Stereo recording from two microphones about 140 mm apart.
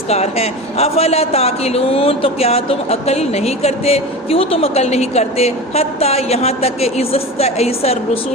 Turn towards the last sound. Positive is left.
turn(degrees=50)  # may be behind; listen again after turning